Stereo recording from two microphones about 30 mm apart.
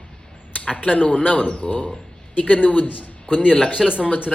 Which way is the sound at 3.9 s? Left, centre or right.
Left.